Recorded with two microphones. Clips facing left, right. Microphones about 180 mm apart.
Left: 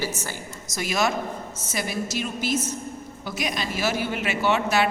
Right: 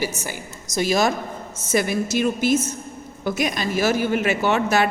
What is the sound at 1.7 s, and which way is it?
A woman's voice, 55° right (ahead or behind).